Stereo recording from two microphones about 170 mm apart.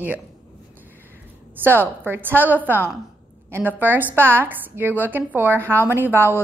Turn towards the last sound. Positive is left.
turn(degrees=-10)  # may be behind; listen again after turning